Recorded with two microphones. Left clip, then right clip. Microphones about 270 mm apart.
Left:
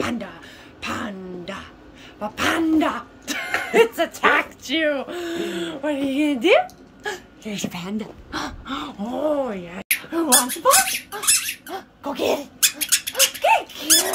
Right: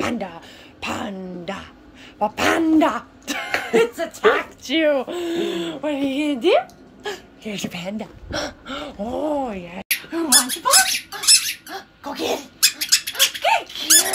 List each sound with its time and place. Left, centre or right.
0.0 s a sound: centre
2.1 s speech: centre
3.7 s speech: centre
10.1 s speech: left